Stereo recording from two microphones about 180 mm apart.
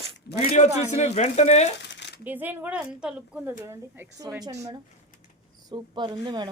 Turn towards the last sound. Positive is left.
turn(degrees=-25)  # may be behind; listen again after turning